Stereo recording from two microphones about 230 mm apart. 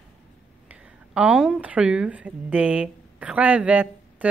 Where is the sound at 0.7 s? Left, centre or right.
Centre.